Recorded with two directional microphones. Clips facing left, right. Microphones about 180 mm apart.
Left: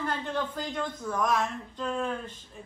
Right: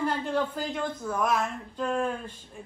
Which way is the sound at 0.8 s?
5° right (ahead or behind).